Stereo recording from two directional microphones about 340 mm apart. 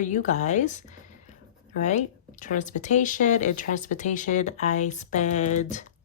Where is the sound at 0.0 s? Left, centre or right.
Left.